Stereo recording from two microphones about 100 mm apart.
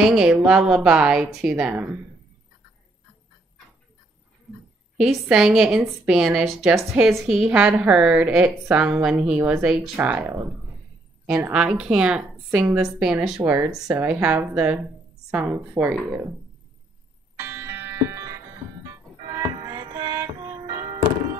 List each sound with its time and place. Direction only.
0.0 s a woman's voice: 10° right (ahead or behind)
4.5 s a sound: 5° right (ahead or behind)
4.9 s a woman's voice: 5° right (ahead or behind)
9.5 s a woman's voice: 5° right (ahead or behind)
9.9 s speech: 20° right (ahead or behind)
11.5 s a woman's voice: 10° right (ahead or behind)
17.4 s music: 25° right (ahead or behind); by 20.7 s 40° right (ahead or behind)
20.8 s thunk: 50° right (ahead or behind)